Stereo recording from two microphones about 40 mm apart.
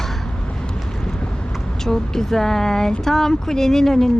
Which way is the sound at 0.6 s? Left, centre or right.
Left.